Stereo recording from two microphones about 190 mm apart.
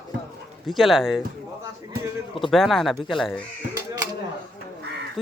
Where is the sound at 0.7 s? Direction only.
Centre (ahead or behind).